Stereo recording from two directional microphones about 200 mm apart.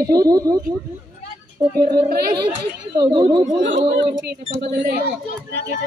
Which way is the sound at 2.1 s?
50° right (ahead or behind).